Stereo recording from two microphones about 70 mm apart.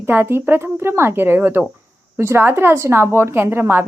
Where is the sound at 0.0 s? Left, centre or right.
Right.